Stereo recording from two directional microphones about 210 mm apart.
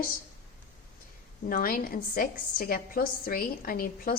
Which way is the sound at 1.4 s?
45° left (ahead or behind).